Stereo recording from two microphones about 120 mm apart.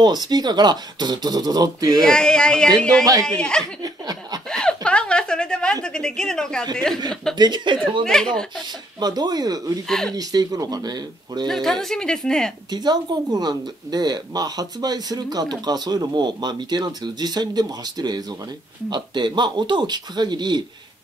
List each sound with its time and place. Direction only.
0.0 s speech: 35° right (ahead or behind)
2.0 s speech: 5° left (ahead or behind)
3.8 s laughter: 30° right (ahead or behind)
4.5 s a sound: 5° left (ahead or behind)
6.7 s a woman's voice: 5° left (ahead or behind)
7.3 s speech: 40° right (ahead or behind)
8.0 s a woman's voice: 5° left (ahead or behind)
9.0 s speech: 35° right (ahead or behind)
9.8 s a woman's voice: 5° left (ahead or behind)
10.1 s speech: 30° right (ahead or behind)
11.4 s a woman's voice: centre (ahead or behind)
12.7 s speech: 35° right (ahead or behind)